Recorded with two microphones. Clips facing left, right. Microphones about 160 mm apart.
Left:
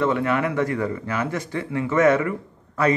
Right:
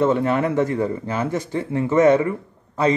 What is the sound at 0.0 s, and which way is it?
A man's voice, 35° right (ahead or behind).